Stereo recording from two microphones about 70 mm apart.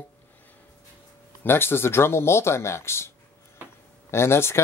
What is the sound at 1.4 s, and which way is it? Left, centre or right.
Speech, left.